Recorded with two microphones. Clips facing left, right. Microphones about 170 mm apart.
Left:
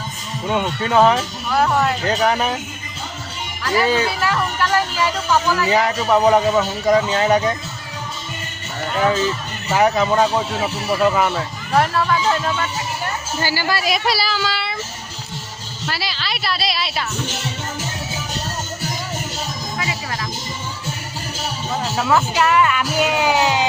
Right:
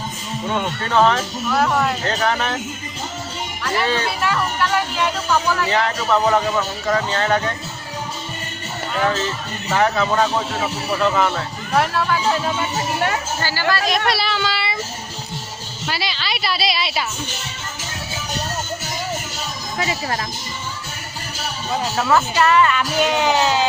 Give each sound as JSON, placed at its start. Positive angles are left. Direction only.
{"t": 0.5, "sound": "speech", "side_deg": 10}
{"t": 3.6, "sound": "speech", "side_deg": 0}
{"t": 9.0, "sound": "speech", "side_deg": 10}
{"t": 13.4, "sound": "speech", "side_deg": 10}
{"t": 15.9, "sound": "speech", "side_deg": 0}
{"t": 19.8, "sound": "speech", "side_deg": -35}
{"t": 21.9, "sound": "speech", "side_deg": 5}